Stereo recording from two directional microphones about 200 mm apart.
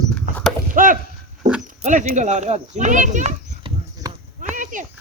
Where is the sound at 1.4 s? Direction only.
40° right (ahead or behind).